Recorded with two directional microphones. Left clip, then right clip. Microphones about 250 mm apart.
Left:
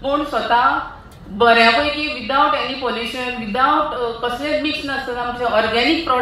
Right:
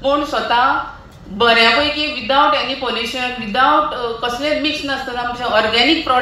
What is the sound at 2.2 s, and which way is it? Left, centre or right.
Speech, right.